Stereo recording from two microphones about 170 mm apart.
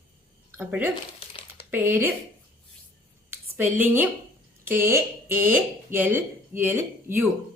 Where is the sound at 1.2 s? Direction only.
35° left (ahead or behind).